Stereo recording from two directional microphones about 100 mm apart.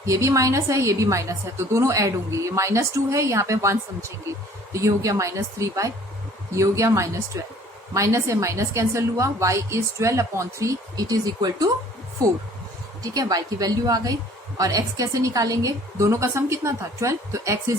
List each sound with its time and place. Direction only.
0.0 s a woman's voice: 30° right (ahead or behind)